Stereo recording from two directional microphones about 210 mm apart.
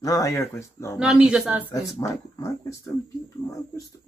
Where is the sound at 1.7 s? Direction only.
15° left (ahead or behind).